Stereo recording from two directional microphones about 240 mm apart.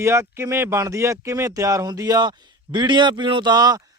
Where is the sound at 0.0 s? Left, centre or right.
Centre.